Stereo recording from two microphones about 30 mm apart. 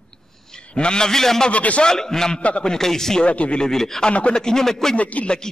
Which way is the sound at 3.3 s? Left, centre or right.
Left.